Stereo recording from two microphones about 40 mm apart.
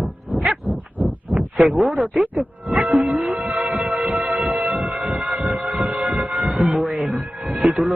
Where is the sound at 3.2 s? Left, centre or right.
Centre.